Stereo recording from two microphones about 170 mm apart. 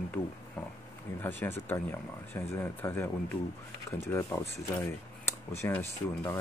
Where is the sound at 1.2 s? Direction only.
10° left (ahead or behind).